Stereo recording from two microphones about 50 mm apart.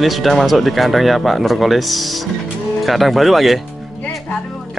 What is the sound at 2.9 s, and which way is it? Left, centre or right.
Speech, centre.